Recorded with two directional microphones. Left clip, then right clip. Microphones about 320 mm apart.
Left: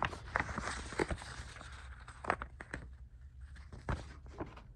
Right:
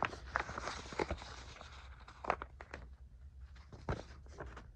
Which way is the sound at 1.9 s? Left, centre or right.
Left.